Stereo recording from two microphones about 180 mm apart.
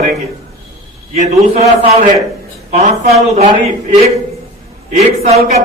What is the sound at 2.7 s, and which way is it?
Speech, 40° right (ahead or behind).